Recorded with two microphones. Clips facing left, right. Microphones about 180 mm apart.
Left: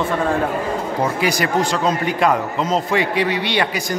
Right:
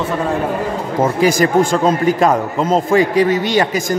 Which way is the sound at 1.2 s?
45° right (ahead or behind).